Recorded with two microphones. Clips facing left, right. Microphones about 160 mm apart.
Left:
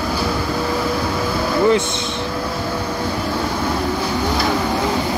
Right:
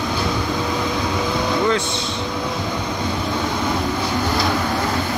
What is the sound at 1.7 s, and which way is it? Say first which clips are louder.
Vehicle: left 3 dB; 20° left (ahead or behind).